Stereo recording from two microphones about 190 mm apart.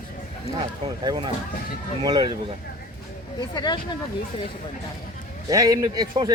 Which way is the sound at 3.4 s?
25° left (ahead or behind).